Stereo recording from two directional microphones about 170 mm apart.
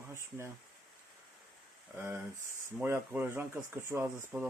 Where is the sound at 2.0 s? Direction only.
15° right (ahead or behind).